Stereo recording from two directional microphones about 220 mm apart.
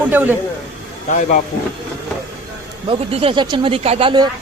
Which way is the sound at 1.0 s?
35° left (ahead or behind).